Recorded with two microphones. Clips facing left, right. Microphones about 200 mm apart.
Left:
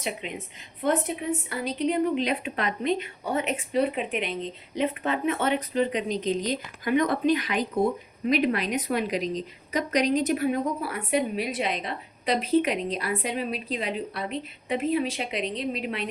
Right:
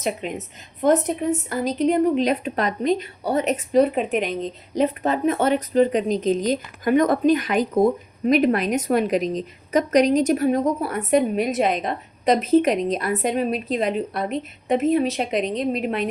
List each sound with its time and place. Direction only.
0.0 s a woman's voice: 45° right (ahead or behind)